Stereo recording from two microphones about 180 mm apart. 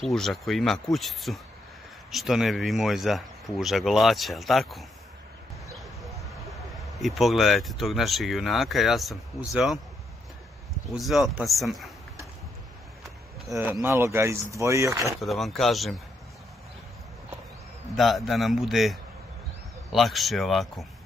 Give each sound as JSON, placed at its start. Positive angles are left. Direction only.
{"t": 0.0, "sound": "speech", "side_deg": 0}
{"t": 5.8, "sound": "a sound", "side_deg": 0}
{"t": 7.0, "sound": "speech", "side_deg": 0}
{"t": 11.0, "sound": "speech", "side_deg": 0}
{"t": 13.6, "sound": "speech", "side_deg": -10}
{"t": 15.1, "sound": "speech", "side_deg": 0}
{"t": 17.9, "sound": "speech", "side_deg": 0}